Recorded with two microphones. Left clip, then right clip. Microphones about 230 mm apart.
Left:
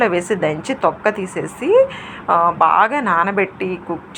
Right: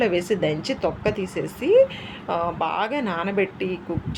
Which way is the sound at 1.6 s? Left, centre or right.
Centre.